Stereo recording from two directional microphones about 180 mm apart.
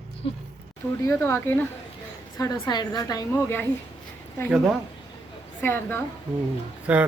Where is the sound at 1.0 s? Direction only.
15° left (ahead or behind).